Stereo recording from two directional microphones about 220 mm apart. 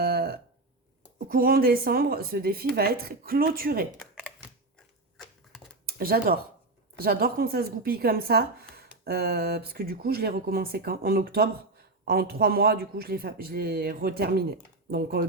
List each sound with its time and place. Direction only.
0.0 s a sound: 45° right (ahead or behind)
1.3 s speech: 40° right (ahead or behind)
3.9 s computer keyboard: centre (ahead or behind)
5.1 s typewriter: centre (ahead or behind)
6.0 s speech: 40° right (ahead or behind)